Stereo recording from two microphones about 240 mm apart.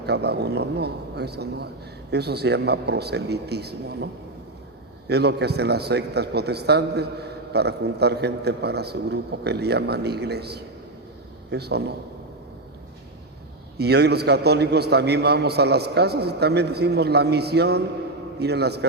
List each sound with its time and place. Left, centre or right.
0.0 s a man's voice: right
13.7 s a man's voice: right